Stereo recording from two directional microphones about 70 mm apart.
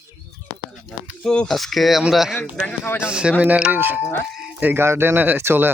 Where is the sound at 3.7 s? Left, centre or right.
Right.